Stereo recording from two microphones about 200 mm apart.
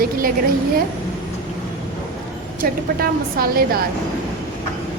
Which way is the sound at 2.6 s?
45° right (ahead or behind).